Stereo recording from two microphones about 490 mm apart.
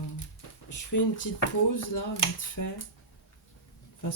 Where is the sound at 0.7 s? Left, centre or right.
Left.